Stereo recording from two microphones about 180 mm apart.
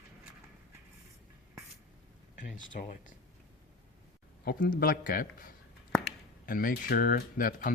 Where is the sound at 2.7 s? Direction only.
50° left (ahead or behind).